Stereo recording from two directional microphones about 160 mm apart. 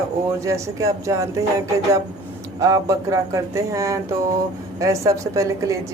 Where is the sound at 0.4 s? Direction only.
20° right (ahead or behind).